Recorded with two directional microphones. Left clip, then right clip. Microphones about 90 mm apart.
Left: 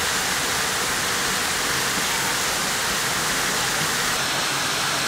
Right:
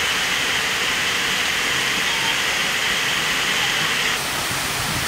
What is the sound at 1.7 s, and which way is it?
Vehicle, 5° right (ahead or behind).